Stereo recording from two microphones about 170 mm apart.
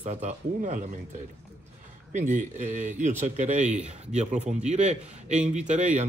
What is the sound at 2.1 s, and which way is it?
Speech, 45° right (ahead or behind).